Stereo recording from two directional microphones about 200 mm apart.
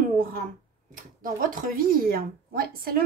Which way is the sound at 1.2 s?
45° right (ahead or behind).